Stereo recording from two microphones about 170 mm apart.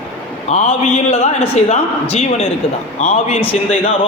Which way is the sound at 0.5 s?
40° left (ahead or behind).